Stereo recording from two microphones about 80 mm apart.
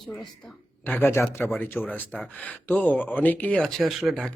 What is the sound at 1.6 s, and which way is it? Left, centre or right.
Speech, left.